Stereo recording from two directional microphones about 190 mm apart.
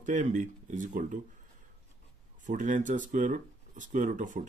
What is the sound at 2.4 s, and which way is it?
Speech, 40° right (ahead or behind).